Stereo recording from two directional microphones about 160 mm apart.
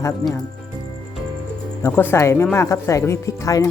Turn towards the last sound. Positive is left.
turn(degrees=20)  # may be behind; listen again after turning